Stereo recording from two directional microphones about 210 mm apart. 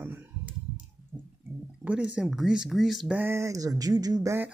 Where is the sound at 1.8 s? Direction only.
5° right (ahead or behind).